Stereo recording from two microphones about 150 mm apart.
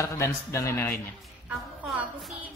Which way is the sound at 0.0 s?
20° left (ahead or behind).